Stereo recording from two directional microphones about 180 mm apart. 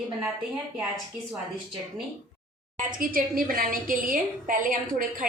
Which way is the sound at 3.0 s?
50° right (ahead or behind).